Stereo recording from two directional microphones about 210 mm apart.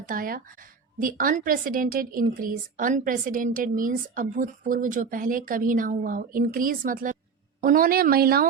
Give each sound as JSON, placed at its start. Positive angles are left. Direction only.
{"t": 0.0, "sound": "a woman's voice", "side_deg": -40}